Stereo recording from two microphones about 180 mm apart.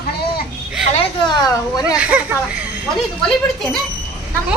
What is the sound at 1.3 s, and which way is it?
Speech, 20° left (ahead or behind).